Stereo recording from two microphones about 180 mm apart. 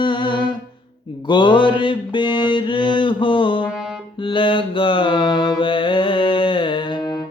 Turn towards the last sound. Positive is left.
turn(degrees=25)  # may be behind; listen again after turning